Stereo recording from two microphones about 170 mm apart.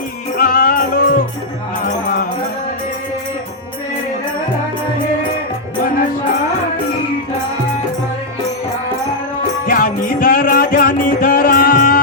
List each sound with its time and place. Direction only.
0.3 s music: 55° left (ahead or behind)
9.6 s music: 55° left (ahead or behind)